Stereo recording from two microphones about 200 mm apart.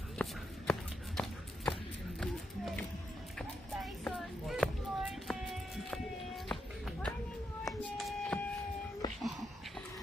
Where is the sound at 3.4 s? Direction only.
Centre (ahead or behind).